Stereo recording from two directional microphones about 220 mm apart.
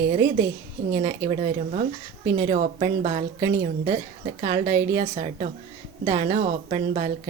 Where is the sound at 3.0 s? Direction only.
30° right (ahead or behind).